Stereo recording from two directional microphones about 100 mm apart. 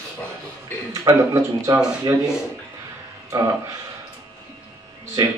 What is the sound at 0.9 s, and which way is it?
Speech, 35° right (ahead or behind).